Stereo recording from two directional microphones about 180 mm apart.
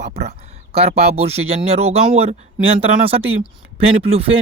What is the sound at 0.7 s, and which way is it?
Speech, 35° right (ahead or behind).